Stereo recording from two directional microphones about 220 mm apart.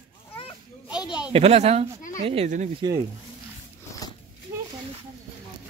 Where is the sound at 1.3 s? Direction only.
30° right (ahead or behind).